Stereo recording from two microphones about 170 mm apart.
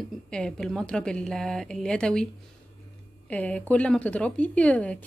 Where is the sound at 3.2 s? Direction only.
10° left (ahead or behind).